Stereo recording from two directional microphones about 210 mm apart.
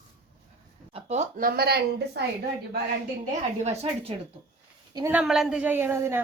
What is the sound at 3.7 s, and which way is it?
Speech, 30° right (ahead or behind).